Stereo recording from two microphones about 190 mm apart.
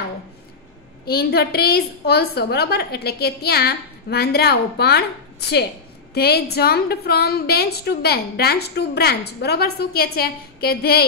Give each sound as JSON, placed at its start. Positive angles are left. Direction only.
{"t": 1.0, "sound": "a woman's voice", "side_deg": 55}
{"t": 6.1, "sound": "a woman's voice", "side_deg": 55}